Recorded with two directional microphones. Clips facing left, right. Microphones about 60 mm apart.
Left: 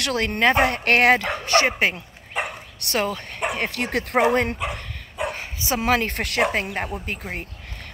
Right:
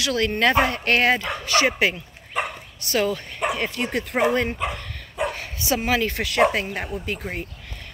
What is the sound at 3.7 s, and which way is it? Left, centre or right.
Speech, left.